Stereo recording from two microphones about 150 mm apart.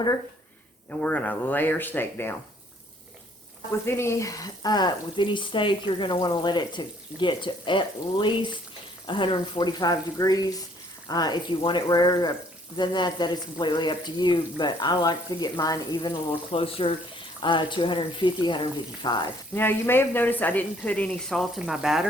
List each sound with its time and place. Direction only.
0.9 s speech: 10° left (ahead or behind)
3.7 s speech: 15° left (ahead or behind)
19.5 s speech: 15° left (ahead or behind); by 22.0 s 5° right (ahead or behind)